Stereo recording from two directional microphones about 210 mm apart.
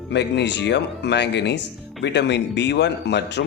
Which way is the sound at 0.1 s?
55° left (ahead or behind).